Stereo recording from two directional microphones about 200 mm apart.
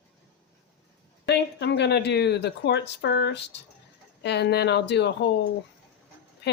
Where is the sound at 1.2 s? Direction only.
55° left (ahead or behind).